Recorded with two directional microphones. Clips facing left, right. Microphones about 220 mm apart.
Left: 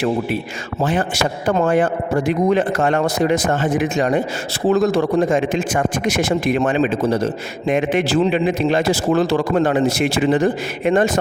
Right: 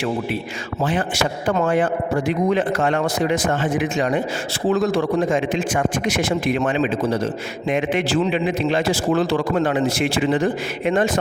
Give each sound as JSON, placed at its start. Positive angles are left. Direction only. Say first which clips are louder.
{"t": 0.8, "sound": "a man's voice", "louder": "left 2 dB", "side_deg": 45}